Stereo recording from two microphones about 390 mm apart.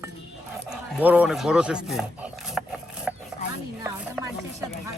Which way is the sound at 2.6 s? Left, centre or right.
Centre.